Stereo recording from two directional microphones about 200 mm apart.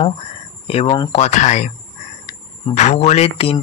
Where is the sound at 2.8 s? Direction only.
35° left (ahead or behind).